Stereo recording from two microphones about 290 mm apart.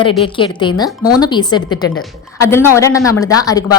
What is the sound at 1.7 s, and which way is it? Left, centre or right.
Speech, left.